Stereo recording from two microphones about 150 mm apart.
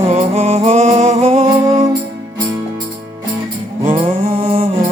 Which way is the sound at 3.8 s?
40° right (ahead or behind).